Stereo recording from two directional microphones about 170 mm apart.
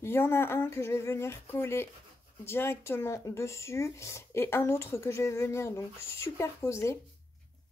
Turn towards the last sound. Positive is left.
turn(degrees=15)  # may be behind; listen again after turning